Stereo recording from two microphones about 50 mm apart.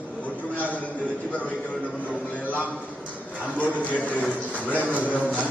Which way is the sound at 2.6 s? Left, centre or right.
Right.